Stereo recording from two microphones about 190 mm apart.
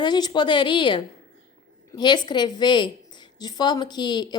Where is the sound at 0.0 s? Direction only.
25° left (ahead or behind).